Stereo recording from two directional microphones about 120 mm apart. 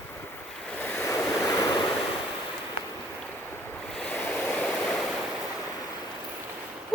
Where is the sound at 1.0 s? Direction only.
25° left (ahead or behind).